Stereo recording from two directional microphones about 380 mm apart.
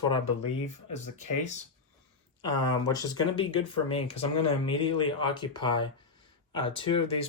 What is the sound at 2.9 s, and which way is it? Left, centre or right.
Speech, centre.